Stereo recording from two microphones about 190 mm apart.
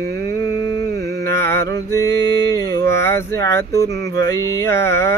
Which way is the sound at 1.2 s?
15° left (ahead or behind).